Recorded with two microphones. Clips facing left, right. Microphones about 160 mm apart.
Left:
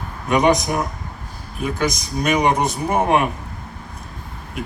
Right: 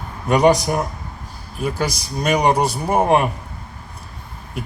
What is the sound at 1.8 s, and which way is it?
Speech, 35° right (ahead or behind).